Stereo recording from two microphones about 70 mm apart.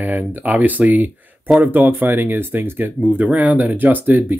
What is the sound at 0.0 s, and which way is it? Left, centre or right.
Speech, right.